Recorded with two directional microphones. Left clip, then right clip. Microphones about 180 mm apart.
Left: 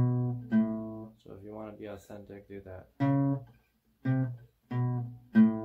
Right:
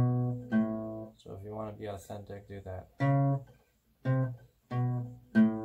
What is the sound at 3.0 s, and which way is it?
Guitar, 30° left (ahead or behind).